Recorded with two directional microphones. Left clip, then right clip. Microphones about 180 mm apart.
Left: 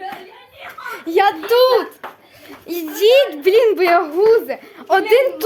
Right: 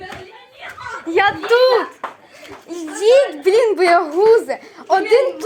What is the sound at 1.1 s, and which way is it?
Speech, 20° left (ahead or behind).